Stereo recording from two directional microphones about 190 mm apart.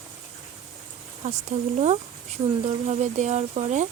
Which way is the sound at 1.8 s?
35° right (ahead or behind).